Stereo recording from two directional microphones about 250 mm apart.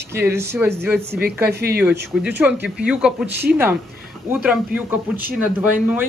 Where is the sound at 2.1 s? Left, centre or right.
Centre.